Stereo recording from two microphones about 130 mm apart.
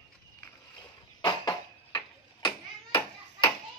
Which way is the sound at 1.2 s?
35° left (ahead or behind).